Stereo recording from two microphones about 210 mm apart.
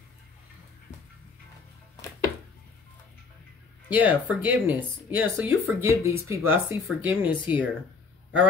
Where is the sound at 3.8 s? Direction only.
10° right (ahead or behind).